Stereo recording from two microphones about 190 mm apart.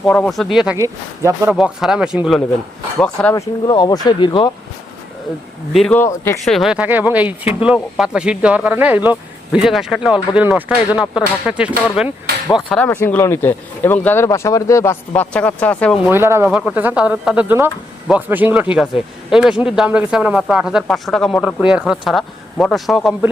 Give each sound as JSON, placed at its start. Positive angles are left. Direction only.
{"t": 0.0, "sound": "speech", "side_deg": 0}
{"t": 0.8, "sound": "speech", "side_deg": -15}
{"t": 1.5, "sound": "speech", "side_deg": -5}
{"t": 3.4, "sound": "speech", "side_deg": 25}
{"t": 5.7, "sound": "speech", "side_deg": 5}
{"t": 6.4, "sound": "speech", "side_deg": 0}
{"t": 12.6, "sound": "speech", "side_deg": 5}
{"t": 16.0, "sound": "speech", "side_deg": -10}